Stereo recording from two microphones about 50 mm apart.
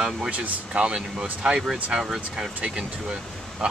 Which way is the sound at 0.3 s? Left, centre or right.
Right.